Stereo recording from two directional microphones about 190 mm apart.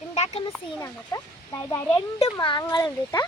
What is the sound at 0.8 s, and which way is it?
Speech, 15° left (ahead or behind).